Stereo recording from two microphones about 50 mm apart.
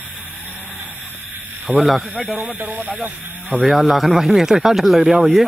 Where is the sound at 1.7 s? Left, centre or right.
Centre.